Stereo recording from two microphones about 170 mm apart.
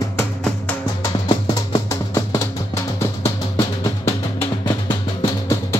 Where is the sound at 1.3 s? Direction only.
20° left (ahead or behind).